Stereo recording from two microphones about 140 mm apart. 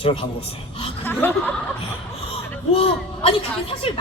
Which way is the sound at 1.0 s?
15° left (ahead or behind).